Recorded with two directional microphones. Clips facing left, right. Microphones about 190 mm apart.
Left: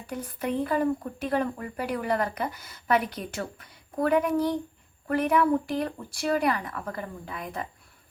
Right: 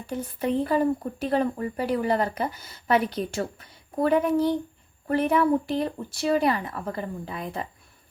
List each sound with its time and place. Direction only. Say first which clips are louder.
0.1 s speech: right 4 dB; 25° right (ahead or behind)